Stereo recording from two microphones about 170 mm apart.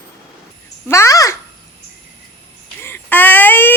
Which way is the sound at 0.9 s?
20° left (ahead or behind).